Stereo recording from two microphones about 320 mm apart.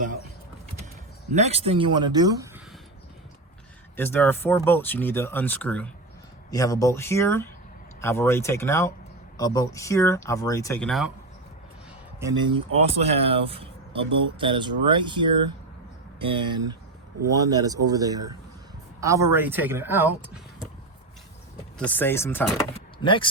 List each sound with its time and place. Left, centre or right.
1.3 s speech: centre
3.9 s speech: centre
12.2 s speech: centre
21.8 s speech: centre